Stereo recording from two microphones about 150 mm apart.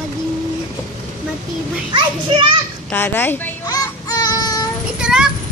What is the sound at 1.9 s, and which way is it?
Speech, 35° right (ahead or behind).